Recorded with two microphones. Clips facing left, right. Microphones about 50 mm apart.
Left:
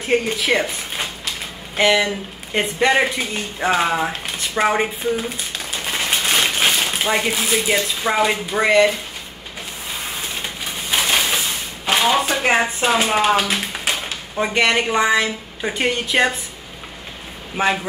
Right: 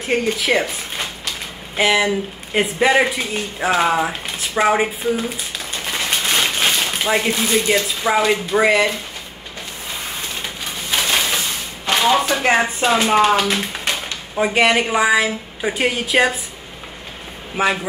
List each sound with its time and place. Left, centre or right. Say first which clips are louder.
0.0 s a woman's voice: even; centre
10.0 s a sound: even; centre
14.3 s a woman's voice: right 2 dB; centre
17.6 s a woman's voice: right 1 dB; centre